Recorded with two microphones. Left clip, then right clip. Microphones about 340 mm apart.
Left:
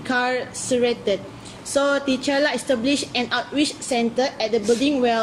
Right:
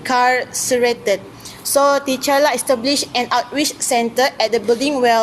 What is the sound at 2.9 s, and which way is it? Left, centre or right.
A woman's voice, centre.